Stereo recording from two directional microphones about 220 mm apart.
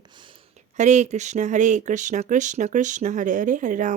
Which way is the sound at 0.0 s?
20° right (ahead or behind).